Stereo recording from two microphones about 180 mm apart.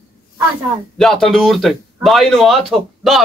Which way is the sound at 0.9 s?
Centre (ahead or behind).